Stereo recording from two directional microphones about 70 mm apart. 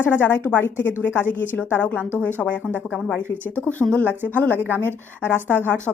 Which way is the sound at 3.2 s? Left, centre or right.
Right.